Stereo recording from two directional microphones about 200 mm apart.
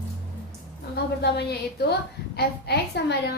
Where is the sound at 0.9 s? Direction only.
55° left (ahead or behind).